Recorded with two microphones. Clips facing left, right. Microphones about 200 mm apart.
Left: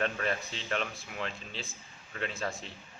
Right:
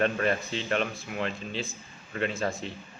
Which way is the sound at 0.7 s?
Centre (ahead or behind).